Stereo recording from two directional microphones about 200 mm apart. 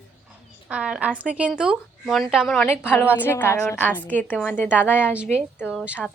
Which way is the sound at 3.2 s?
10° left (ahead or behind).